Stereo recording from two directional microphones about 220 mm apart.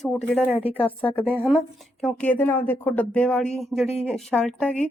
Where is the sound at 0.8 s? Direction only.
5° left (ahead or behind).